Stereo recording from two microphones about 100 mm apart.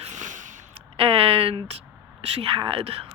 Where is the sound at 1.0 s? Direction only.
70° right (ahead or behind).